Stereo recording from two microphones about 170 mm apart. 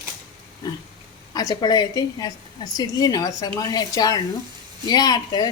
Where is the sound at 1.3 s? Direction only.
20° left (ahead or behind).